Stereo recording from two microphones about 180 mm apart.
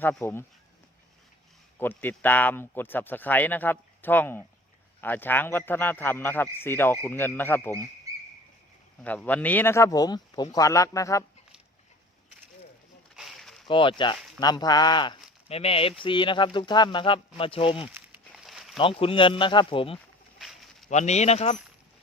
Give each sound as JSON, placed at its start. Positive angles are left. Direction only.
{"t": 0.0, "sound": "speech", "side_deg": 10}
{"t": 1.8, "sound": "speech", "side_deg": 10}
{"t": 9.0, "sound": "speech", "side_deg": 10}
{"t": 13.1, "sound": "a sound", "side_deg": 0}
{"t": 13.7, "sound": "speech", "side_deg": 30}
{"t": 17.8, "sound": "a sound", "side_deg": -10}
{"t": 18.8, "sound": "speech", "side_deg": 30}
{"t": 20.4, "sound": "a sound", "side_deg": 0}
{"t": 20.9, "sound": "speech", "side_deg": 40}